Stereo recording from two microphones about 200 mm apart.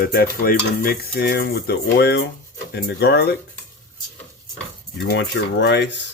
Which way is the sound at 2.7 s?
55° left (ahead or behind).